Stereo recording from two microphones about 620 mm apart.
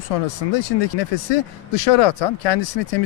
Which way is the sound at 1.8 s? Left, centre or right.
Left.